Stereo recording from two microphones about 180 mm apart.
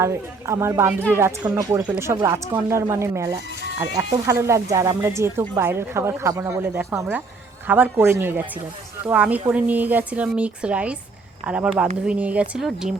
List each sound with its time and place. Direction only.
0.0 s a woman's voice: 15° right (ahead or behind)